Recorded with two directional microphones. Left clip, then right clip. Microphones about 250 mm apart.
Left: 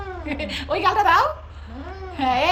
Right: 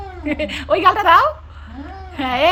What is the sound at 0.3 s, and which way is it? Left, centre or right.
A woman's voice, centre.